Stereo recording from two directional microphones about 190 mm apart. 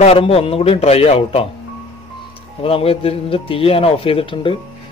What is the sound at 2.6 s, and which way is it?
A man's voice, 30° left (ahead or behind).